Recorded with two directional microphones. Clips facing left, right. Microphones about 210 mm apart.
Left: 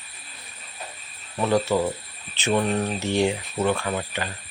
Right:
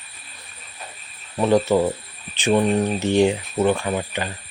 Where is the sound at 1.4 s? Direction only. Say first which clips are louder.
Right 4 dB; 20° right (ahead or behind).